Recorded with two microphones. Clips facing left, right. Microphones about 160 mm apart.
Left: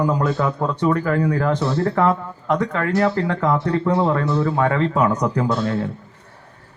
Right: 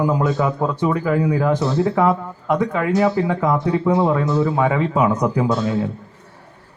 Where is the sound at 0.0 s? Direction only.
5° right (ahead or behind).